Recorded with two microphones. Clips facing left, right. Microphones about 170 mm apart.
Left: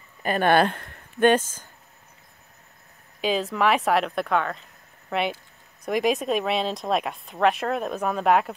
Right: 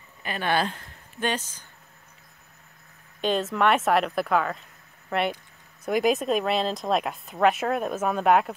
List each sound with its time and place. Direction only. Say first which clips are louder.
0.2 s speech: left 6 dB; 50° left (ahead or behind)
3.2 s speech: even; centre (ahead or behind)